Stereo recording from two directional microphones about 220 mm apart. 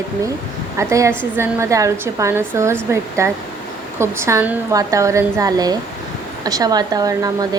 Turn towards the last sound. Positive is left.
turn(degrees=-15)  # may be behind; listen again after turning